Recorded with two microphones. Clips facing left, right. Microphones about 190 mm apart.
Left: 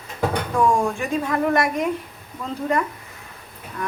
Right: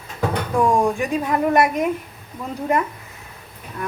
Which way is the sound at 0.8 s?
15° right (ahead or behind).